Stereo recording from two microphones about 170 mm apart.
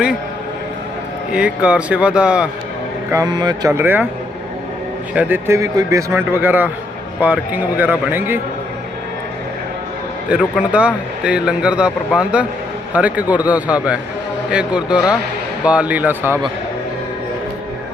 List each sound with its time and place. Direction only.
1.3 s speech: 5° right (ahead or behind)
3.1 s speech: 20° right (ahead or behind)
5.1 s speech: 15° right (ahead or behind)
10.6 s a man's voice: 5° right (ahead or behind)